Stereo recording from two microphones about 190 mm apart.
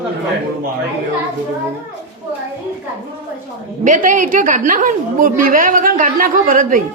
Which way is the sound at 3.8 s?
45° right (ahead or behind).